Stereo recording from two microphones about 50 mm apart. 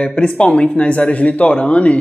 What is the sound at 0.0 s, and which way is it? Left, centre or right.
A man's voice, left.